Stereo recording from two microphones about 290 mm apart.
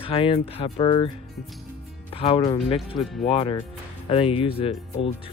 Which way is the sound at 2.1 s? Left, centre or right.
Centre.